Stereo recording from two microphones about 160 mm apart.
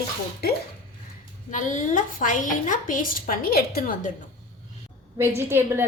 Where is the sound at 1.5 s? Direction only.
50° left (ahead or behind).